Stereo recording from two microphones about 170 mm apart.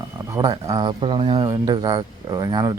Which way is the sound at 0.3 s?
25° right (ahead or behind).